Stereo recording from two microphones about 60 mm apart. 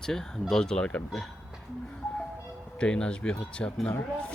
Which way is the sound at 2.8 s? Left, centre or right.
Centre.